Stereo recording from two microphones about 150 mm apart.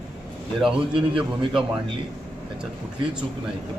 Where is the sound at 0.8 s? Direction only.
35° right (ahead or behind).